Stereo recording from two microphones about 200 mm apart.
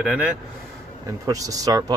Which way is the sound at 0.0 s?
5° right (ahead or behind).